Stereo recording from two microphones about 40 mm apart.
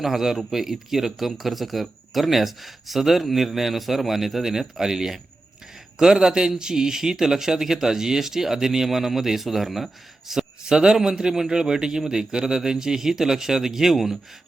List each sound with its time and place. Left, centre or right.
0.0 s a man's voice: centre